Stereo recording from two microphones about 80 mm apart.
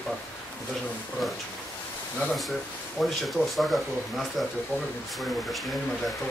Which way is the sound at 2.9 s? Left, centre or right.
Centre.